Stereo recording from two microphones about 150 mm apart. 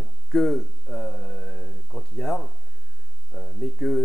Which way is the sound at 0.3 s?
5° left (ahead or behind).